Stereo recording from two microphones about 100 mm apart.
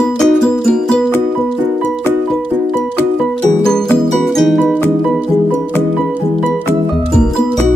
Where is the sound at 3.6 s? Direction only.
5° left (ahead or behind).